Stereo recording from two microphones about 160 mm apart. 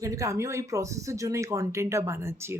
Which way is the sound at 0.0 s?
20° right (ahead or behind).